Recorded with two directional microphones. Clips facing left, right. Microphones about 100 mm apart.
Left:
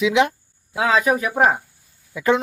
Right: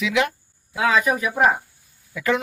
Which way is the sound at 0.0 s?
25° left (ahead or behind).